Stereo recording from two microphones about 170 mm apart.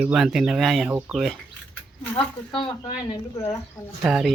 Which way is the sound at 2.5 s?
30° left (ahead or behind).